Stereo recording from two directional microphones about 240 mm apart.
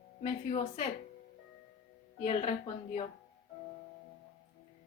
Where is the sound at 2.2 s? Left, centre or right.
Left.